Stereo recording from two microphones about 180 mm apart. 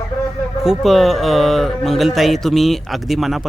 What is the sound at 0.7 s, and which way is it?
Speech, centre (ahead or behind).